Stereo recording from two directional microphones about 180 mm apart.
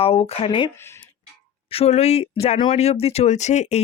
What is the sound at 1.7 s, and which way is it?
Speech, 35° left (ahead or behind).